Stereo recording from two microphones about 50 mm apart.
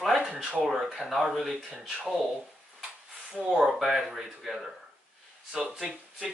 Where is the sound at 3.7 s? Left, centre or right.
Centre.